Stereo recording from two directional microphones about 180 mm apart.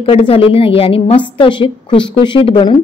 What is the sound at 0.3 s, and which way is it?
A woman's voice, 30° left (ahead or behind).